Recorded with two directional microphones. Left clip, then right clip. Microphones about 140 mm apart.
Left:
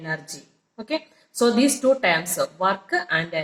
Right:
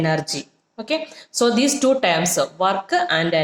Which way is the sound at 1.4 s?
35° right (ahead or behind).